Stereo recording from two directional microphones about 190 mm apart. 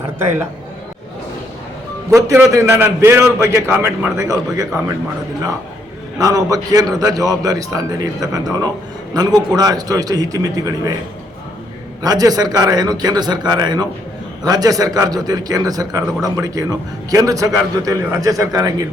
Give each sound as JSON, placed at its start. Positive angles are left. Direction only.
{"t": 0.2, "sound": "a man's voice", "side_deg": -10}
{"t": 2.1, "sound": "a man's voice", "side_deg": -15}
{"t": 6.1, "sound": "a man's voice", "side_deg": -20}
{"t": 12.0, "sound": "a man's voice", "side_deg": -20}